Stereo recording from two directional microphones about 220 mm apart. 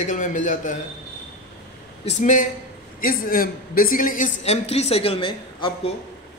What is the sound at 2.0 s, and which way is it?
A man's voice, 35° left (ahead or behind).